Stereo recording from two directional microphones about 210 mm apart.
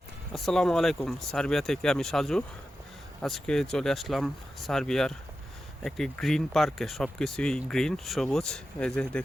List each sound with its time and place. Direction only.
0.3 s speech: centre (ahead or behind)